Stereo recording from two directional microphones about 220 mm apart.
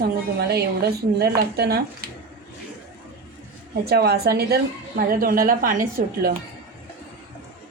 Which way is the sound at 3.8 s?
45° right (ahead or behind).